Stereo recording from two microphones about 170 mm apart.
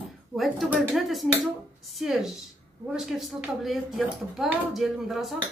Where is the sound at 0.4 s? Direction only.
Centre (ahead or behind).